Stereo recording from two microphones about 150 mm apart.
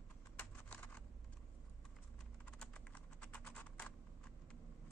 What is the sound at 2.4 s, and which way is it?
Computer keyboard, 5° left (ahead or behind).